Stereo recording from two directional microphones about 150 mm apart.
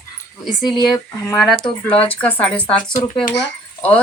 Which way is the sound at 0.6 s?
25° left (ahead or behind).